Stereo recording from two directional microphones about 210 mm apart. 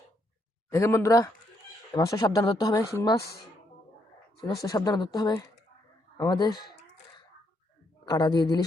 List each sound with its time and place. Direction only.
0.7 s speech: 15° left (ahead or behind)
4.4 s speech: 20° left (ahead or behind)
8.0 s speech: 20° left (ahead or behind)